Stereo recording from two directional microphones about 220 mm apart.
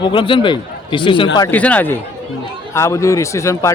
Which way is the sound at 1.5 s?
5° left (ahead or behind).